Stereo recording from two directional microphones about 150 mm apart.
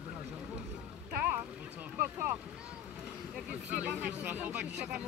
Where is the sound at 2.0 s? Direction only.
15° right (ahead or behind).